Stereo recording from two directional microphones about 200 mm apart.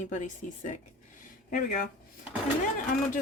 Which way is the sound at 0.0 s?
40° left (ahead or behind).